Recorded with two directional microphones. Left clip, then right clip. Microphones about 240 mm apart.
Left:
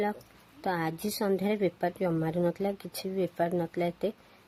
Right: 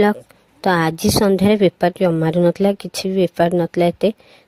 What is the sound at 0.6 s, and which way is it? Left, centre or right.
A woman's voice, right.